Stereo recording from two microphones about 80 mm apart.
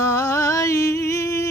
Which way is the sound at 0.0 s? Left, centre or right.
Left.